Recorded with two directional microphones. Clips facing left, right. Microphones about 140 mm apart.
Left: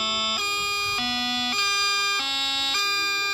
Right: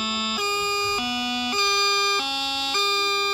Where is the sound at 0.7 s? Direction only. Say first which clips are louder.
Right 4 dB; 15° right (ahead or behind).